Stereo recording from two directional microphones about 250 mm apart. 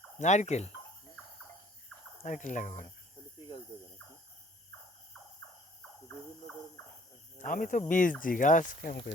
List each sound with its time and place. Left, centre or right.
0.2 s speech: left
2.2 s speech: left
7.3 s speech: left